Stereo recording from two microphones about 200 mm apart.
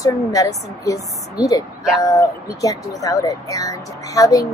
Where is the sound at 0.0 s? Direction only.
15° left (ahead or behind).